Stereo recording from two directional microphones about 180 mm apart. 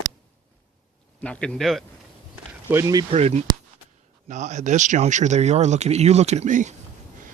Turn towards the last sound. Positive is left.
turn(degrees=-45)  # may be behind; listen again after turning